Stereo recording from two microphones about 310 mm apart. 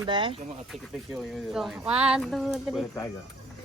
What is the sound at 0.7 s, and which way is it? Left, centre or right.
Speech, centre.